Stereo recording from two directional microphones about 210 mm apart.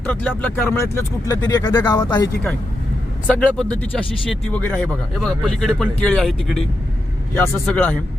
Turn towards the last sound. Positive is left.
turn(degrees=5)  # may be behind; listen again after turning